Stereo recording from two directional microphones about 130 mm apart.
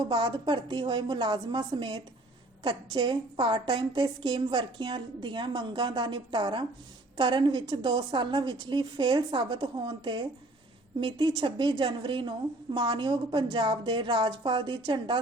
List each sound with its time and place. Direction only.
0.0 s a woman's voice: 40° right (ahead or behind)